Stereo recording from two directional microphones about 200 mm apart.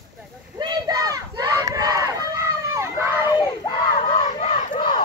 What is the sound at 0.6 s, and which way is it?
Crowd, 20° right (ahead or behind).